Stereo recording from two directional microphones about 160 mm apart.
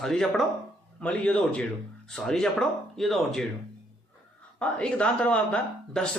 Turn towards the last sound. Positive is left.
turn(degrees=5)  # may be behind; listen again after turning